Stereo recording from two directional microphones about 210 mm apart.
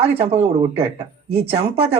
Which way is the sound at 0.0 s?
30° right (ahead or behind).